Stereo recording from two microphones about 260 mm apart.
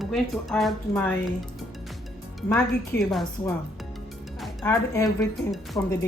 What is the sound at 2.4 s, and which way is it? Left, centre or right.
Speech, centre.